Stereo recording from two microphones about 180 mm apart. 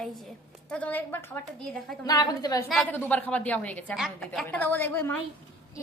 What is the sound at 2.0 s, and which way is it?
Speech, 20° left (ahead or behind).